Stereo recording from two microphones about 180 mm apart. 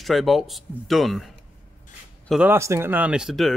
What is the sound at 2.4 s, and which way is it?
Speech, 15° right (ahead or behind).